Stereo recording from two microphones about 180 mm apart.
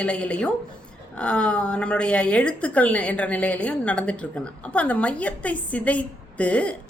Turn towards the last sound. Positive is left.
turn(degrees=5)  # may be behind; listen again after turning